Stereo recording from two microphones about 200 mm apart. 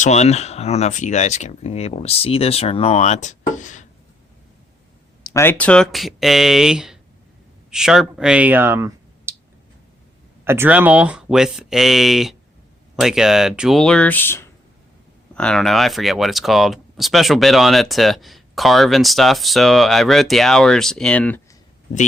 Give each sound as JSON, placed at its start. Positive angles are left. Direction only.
{"t": 0.0, "sound": "speech", "side_deg": 35}
{"t": 5.3, "sound": "speech", "side_deg": 10}
{"t": 10.4, "sound": "speech", "side_deg": -10}